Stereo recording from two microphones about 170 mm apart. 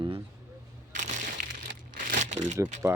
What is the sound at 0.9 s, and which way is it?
Crumpling, 45° right (ahead or behind).